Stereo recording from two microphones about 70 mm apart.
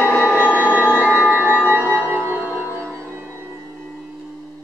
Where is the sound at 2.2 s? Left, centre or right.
Right.